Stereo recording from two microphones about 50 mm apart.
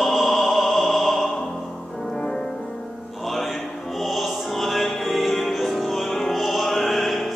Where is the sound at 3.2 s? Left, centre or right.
Centre.